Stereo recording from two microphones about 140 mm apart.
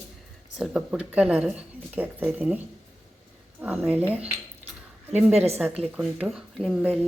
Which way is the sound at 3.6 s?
10° right (ahead or behind).